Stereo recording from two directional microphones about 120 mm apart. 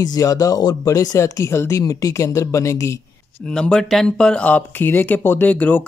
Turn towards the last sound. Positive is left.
turn(degrees=15)  # may be behind; listen again after turning